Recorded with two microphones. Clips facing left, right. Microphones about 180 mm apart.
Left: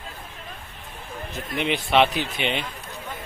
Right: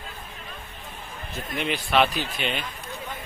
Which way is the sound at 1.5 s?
20° left (ahead or behind).